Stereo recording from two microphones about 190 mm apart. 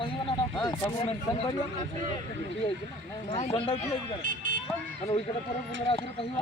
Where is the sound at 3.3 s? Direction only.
35° left (ahead or behind).